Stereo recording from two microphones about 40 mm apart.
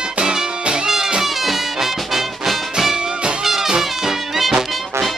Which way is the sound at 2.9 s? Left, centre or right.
Right.